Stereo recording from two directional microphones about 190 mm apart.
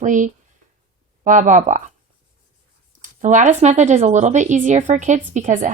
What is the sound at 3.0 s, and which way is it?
Speech, 40° right (ahead or behind).